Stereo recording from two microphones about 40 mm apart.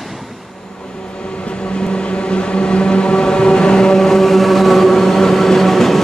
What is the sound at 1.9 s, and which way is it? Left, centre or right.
Vehicle, left.